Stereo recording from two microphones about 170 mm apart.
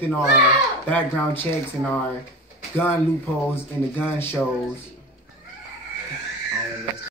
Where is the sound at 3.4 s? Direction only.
15° left (ahead or behind).